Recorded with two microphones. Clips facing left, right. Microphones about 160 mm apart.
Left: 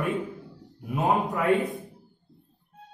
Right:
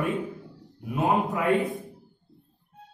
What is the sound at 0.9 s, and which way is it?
Speech, centre (ahead or behind).